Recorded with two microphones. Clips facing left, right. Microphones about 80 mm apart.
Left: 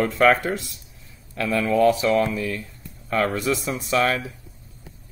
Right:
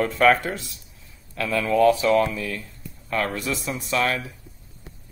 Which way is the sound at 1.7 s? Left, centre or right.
Centre.